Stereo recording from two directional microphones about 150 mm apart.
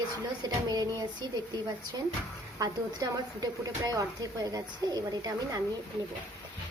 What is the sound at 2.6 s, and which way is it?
Speech, 25° right (ahead or behind).